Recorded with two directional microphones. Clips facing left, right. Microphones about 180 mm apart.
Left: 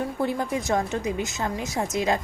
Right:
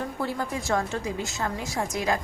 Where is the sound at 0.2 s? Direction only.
20° left (ahead or behind).